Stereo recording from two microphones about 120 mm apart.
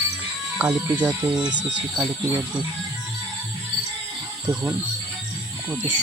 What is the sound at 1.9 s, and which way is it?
Speech, 10° right (ahead or behind).